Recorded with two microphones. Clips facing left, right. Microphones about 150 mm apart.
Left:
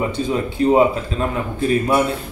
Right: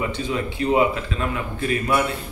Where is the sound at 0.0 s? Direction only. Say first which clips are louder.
Left 4 dB; 35° left (ahead or behind).